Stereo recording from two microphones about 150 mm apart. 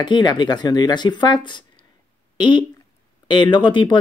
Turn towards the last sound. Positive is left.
turn(degrees=30)  # may be behind; listen again after turning